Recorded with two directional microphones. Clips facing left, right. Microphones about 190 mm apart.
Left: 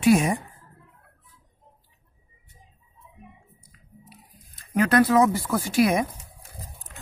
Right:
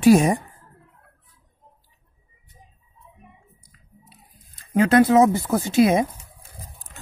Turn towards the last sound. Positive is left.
turn(degrees=-25)  # may be behind; listen again after turning